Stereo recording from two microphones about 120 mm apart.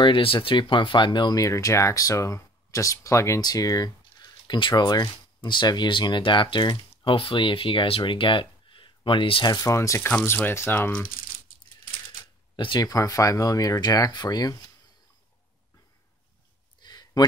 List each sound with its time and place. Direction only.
0.0 s speech: 45° left (ahead or behind)
9.5 s speech: 25° left (ahead or behind)
12.5 s speech: 40° left (ahead or behind)
16.8 s a sound: 35° left (ahead or behind)